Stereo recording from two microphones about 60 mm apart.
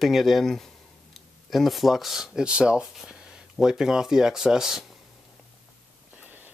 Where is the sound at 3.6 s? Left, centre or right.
Centre.